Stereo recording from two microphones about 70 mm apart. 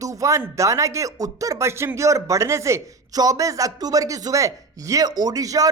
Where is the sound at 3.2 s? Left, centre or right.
Right.